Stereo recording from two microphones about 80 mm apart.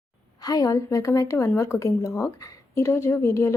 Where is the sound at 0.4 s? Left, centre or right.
Left.